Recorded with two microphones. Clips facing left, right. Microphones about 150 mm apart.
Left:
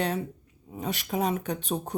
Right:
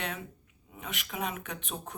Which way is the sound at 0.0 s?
35° left (ahead or behind).